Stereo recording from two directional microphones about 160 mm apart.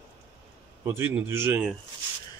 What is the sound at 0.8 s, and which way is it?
Speech, 15° right (ahead or behind).